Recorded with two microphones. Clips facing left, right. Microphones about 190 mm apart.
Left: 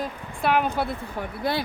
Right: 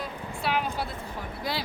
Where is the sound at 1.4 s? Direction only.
55° left (ahead or behind).